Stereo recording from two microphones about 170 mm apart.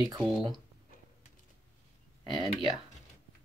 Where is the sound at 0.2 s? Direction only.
Centre (ahead or behind).